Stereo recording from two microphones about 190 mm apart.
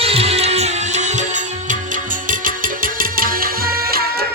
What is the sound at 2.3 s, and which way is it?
Music, 45° right (ahead or behind).